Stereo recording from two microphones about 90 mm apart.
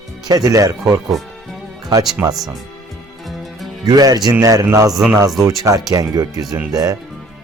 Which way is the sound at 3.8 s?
45° right (ahead or behind).